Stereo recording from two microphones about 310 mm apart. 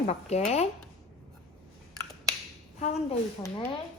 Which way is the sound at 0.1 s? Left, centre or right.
Left.